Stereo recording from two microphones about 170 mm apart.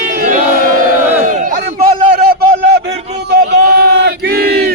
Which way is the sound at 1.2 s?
50° right (ahead or behind).